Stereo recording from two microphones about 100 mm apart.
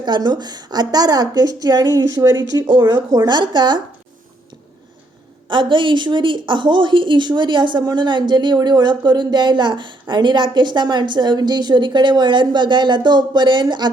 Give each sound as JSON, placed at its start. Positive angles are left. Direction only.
{"t": 0.0, "sound": "a woman's voice", "side_deg": -45}
{"t": 5.5, "sound": "a woman's voice", "side_deg": -55}